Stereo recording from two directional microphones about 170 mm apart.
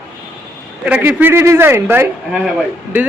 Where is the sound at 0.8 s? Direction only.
10° right (ahead or behind).